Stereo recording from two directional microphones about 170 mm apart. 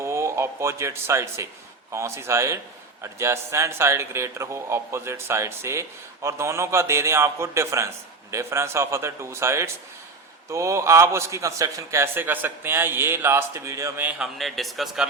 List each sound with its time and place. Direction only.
0.0 s a man's voice: 15° right (ahead or behind); by 15.0 s centre (ahead or behind)